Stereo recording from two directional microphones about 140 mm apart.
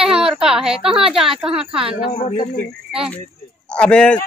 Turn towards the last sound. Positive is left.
turn(degrees=10)  # may be behind; listen again after turning